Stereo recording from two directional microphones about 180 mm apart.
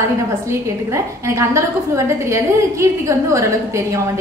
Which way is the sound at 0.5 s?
15° right (ahead or behind).